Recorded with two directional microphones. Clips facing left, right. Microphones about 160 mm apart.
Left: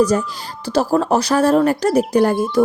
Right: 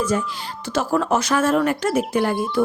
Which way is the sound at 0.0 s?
40° left (ahead or behind).